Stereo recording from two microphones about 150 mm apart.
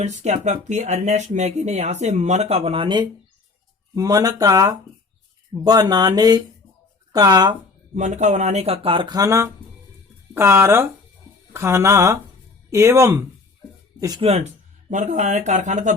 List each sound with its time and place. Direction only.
0.0 s speech: 50° right (ahead or behind); by 7.5 s 25° right (ahead or behind)
7.9 s speech: 50° right (ahead or behind); by 13.2 s 15° right (ahead or behind)
14.2 s speech: 45° right (ahead or behind)
14.8 s speech: 55° right (ahead or behind)